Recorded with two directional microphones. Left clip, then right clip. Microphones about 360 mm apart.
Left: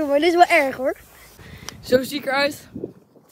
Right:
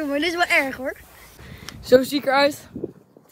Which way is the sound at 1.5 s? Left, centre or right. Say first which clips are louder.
Right 3 dB; centre.